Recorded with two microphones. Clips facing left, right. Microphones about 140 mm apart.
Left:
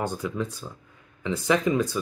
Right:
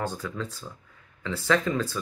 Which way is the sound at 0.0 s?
15° left (ahead or behind).